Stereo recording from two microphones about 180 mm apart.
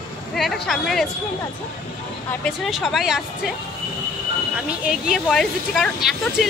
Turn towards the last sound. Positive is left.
turn(degrees=0)  # may be behind; listen again after turning